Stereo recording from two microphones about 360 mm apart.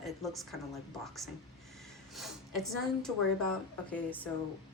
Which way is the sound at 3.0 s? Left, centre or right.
Centre.